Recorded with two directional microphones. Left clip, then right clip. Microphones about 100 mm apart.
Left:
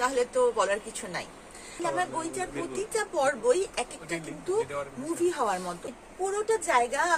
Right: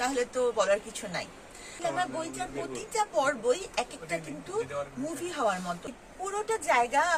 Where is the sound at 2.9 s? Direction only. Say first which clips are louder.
Even; 20° left (ahead or behind).